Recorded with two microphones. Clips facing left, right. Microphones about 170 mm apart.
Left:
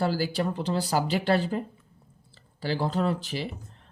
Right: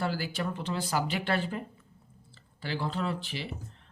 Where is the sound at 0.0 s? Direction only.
35° left (ahead or behind).